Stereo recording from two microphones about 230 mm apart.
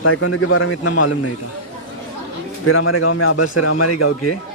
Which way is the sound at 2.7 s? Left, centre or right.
Left.